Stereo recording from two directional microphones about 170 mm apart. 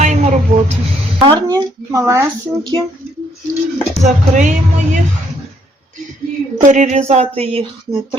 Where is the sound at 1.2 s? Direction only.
20° right (ahead or behind).